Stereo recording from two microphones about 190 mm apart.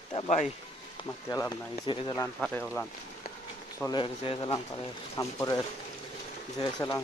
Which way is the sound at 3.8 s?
25° left (ahead or behind).